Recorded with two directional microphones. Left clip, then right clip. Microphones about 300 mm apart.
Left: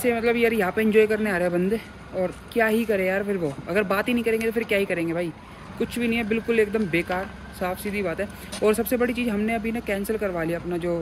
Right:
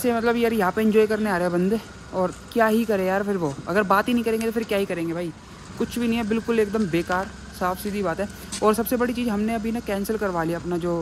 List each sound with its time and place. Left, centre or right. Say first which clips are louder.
0.0 s speech: even; centre
10.2 s speech: right 1 dB; right